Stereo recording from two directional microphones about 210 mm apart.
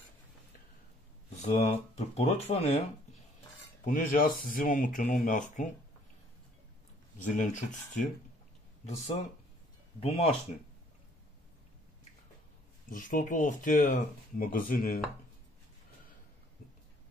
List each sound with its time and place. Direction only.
1.4 s speech: 35° left (ahead or behind)
3.8 s speech: 40° left (ahead or behind)
7.2 s speech: 35° left (ahead or behind)
12.9 s speech: 40° left (ahead or behind)